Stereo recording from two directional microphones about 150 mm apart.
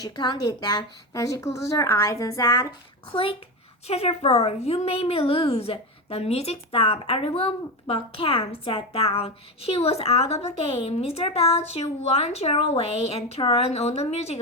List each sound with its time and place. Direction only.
0.0 s a woman's voice: 30° left (ahead or behind)
3.1 s a child's voice: 35° left (ahead or behind)